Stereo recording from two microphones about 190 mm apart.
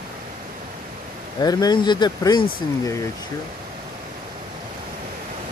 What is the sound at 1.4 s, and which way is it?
Speech, 20° left (ahead or behind).